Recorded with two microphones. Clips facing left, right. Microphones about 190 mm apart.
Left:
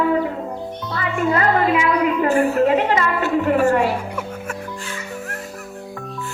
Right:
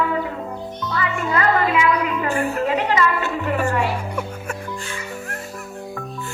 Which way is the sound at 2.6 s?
50° left (ahead or behind).